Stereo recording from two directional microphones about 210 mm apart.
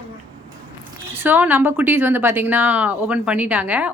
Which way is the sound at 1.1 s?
10° right (ahead or behind).